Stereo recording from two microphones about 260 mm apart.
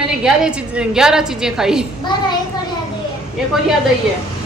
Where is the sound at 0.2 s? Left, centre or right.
Centre.